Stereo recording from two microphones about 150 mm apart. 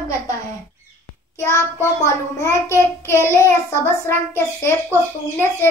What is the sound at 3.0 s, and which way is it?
A child's voice, 15° left (ahead or behind).